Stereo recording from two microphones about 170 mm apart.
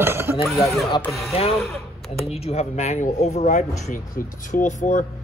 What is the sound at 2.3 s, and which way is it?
Speech, 35° left (ahead or behind).